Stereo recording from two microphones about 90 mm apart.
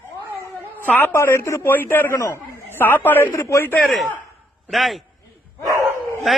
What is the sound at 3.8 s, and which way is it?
A man's voice, centre (ahead or behind).